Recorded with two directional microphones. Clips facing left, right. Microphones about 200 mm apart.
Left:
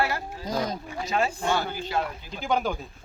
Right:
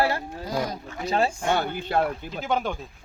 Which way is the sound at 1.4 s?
60° right (ahead or behind).